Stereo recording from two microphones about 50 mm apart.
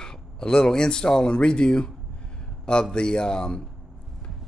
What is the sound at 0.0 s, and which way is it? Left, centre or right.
Speech, centre.